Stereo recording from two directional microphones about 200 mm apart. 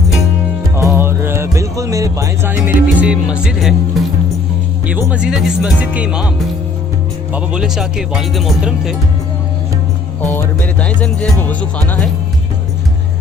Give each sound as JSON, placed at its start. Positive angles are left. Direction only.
{"t": 0.8, "sound": "music", "side_deg": -10}
{"t": 5.1, "sound": "speech", "side_deg": -5}
{"t": 7.3, "sound": "speech", "side_deg": -5}
{"t": 10.2, "sound": "music", "side_deg": 10}